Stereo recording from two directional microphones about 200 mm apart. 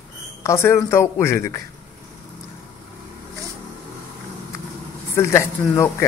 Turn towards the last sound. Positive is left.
turn(degrees=15)  # may be behind; listen again after turning